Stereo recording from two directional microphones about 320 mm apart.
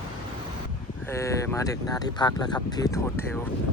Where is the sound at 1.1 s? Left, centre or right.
Centre.